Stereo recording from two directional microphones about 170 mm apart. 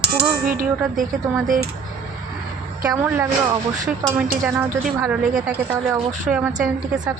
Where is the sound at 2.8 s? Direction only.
20° right (ahead or behind).